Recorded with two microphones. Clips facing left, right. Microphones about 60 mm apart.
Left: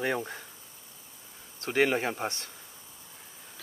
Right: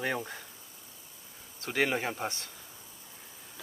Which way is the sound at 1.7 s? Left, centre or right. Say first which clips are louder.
Left 4 dB; centre.